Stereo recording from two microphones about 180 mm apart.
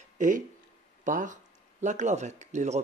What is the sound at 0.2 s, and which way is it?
Speech, 45° right (ahead or behind).